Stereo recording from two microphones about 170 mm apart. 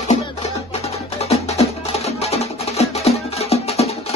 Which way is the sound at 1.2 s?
40° left (ahead or behind).